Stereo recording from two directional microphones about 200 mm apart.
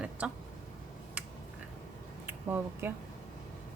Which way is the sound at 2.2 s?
10° right (ahead or behind).